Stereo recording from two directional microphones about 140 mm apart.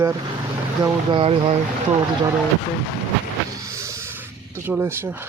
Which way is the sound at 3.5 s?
20° right (ahead or behind).